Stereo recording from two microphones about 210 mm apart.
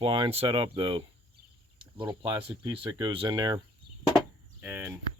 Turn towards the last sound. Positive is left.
turn(degrees=-10)  # may be behind; listen again after turning